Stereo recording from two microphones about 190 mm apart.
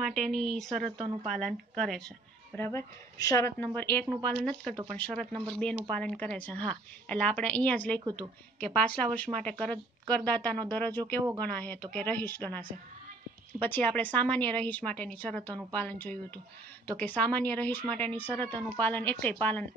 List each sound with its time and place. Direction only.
0.0 s speech: centre (ahead or behind)
2.5 s a woman's voice: 15° left (ahead or behind)
8.0 s a woman's voice: 20° right (ahead or behind)
8.5 s a woman's voice: 5° left (ahead or behind)